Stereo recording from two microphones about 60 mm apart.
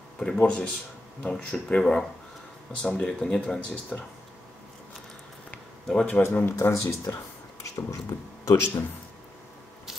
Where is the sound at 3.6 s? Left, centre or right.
Left.